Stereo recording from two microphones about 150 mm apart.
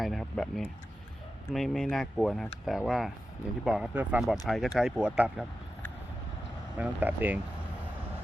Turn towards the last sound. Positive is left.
turn(degrees=-10)  # may be behind; listen again after turning